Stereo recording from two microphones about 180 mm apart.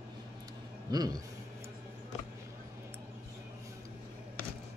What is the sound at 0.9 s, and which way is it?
Speech, 20° right (ahead or behind).